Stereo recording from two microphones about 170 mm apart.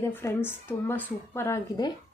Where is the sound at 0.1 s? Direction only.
15° left (ahead or behind).